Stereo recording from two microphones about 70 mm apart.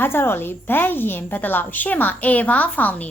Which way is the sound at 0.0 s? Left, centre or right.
Left.